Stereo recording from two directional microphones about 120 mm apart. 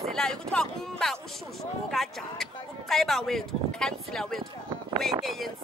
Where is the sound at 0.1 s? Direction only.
5° left (ahead or behind).